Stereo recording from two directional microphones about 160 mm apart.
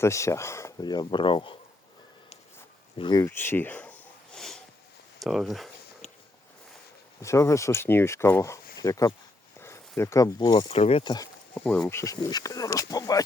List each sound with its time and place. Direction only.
0.0 s speech: 20° left (ahead or behind)
3.0 s speech: 25° left (ahead or behind)
3.2 s sniff: 15° left (ahead or behind)
5.2 s speech: centre (ahead or behind)
6.0 s a sound: 45° left (ahead or behind)
7.2 s speech: 20° left (ahead or behind)
9.6 s a sound: 15° left (ahead or behind)
10.0 s speech: 20° left (ahead or behind)
10.7 s speech: 40° left (ahead or behind)
11.5 s speech: 5° left (ahead or behind); by 13.2 s 20° left (ahead or behind)